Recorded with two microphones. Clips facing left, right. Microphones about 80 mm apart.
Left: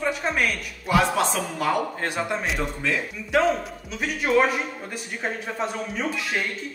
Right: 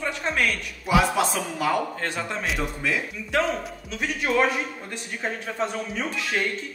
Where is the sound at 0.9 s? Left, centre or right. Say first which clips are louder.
Even; centre.